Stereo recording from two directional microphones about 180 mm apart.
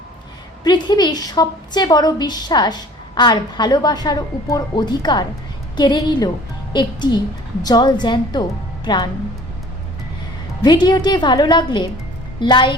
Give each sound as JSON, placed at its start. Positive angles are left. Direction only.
{"t": 0.6, "sound": "a woman's voice", "side_deg": 25}
{"t": 10.6, "sound": "a woman's voice", "side_deg": 25}